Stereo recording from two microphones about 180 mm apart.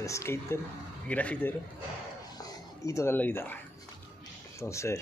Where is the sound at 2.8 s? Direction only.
15° left (ahead or behind).